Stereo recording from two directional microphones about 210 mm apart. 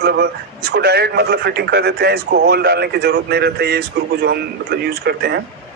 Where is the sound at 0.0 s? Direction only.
50° right (ahead or behind).